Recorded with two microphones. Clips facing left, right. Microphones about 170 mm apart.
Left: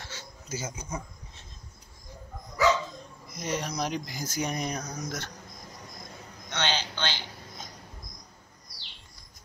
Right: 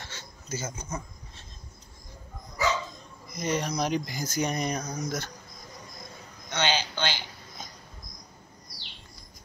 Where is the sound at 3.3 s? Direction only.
Centre (ahead or behind).